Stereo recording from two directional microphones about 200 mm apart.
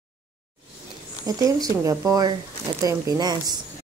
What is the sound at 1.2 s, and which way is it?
Speech, 15° right (ahead or behind).